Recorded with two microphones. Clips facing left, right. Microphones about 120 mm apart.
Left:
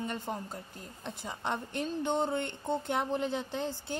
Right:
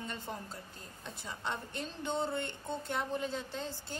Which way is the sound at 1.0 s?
15° left (ahead or behind).